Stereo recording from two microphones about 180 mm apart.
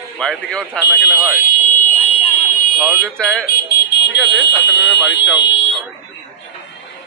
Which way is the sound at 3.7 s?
65° left (ahead or behind).